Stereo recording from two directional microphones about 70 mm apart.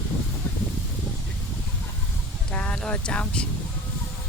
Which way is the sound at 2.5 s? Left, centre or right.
Centre.